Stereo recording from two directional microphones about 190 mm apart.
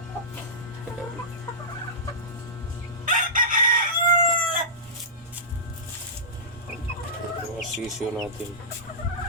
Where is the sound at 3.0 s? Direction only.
45° right (ahead or behind).